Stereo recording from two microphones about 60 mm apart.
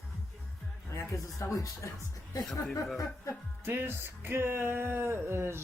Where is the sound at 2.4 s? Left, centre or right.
Centre.